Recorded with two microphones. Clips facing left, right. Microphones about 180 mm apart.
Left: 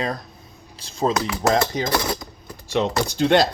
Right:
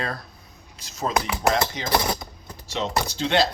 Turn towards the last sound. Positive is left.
turn(degrees=55)  # may be behind; listen again after turning